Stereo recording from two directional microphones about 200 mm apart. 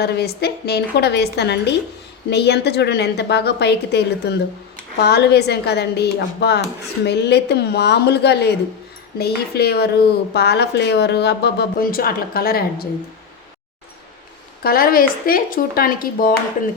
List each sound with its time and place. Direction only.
0.0 s a woman's voice: 55° left (ahead or behind)
14.6 s a woman's voice: 50° left (ahead or behind)